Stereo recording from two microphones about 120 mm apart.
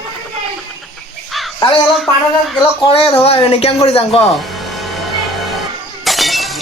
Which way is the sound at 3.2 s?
55° left (ahead or behind).